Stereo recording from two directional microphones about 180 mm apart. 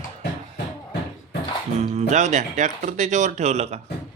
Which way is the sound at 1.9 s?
40° right (ahead or behind).